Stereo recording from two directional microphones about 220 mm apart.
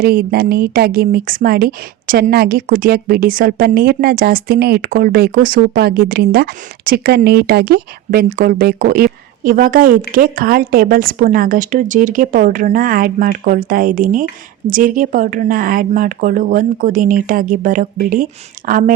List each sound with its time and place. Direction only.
0.0 s a woman's voice: 40° right (ahead or behind)